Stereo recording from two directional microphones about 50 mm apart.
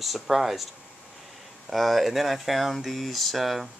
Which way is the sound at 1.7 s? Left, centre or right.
Centre.